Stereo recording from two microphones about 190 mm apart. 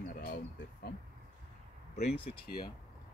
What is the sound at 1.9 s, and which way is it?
Speech, 30° left (ahead or behind).